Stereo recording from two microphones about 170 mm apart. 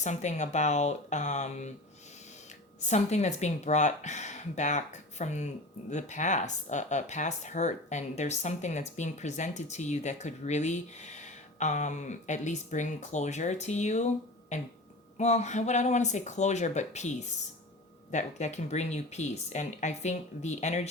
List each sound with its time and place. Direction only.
0.0 s speech: 45° left (ahead or behind)
2.8 s speech: 40° left (ahead or behind)